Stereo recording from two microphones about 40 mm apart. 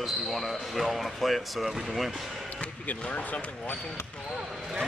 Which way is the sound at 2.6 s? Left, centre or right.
Left.